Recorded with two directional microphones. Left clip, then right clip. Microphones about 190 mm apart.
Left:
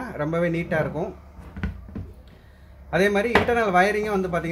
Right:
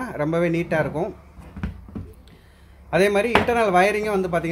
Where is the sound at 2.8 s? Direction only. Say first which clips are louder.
Right 2 dB; 25° right (ahead or behind).